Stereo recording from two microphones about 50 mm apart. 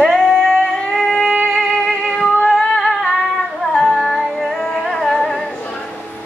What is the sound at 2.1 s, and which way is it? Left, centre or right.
Music, centre.